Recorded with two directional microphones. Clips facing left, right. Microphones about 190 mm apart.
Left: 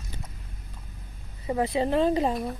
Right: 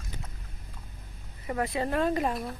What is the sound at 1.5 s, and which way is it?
Speech, 20° left (ahead or behind).